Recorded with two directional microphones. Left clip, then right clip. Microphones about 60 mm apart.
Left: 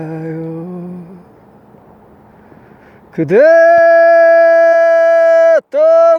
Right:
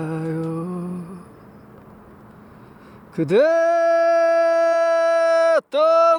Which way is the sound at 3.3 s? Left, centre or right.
Left.